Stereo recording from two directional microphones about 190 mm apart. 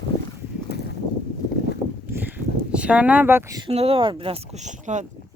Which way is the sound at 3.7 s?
30° right (ahead or behind).